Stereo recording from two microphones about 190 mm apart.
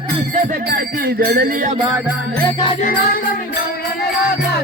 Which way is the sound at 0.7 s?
55° right (ahead or behind).